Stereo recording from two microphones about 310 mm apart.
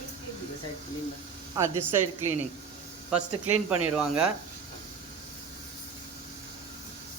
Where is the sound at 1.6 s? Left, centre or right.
Centre.